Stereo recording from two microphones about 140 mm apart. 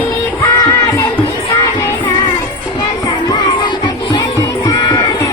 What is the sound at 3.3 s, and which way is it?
Music, 35° left (ahead or behind).